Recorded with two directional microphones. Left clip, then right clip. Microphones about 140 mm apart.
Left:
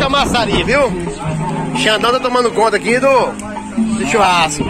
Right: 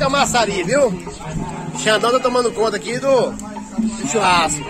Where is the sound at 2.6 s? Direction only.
25° left (ahead or behind).